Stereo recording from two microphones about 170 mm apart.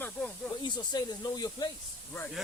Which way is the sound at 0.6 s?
25° left (ahead or behind).